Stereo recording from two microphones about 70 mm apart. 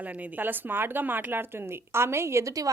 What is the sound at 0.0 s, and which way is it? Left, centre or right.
A woman's voice, right.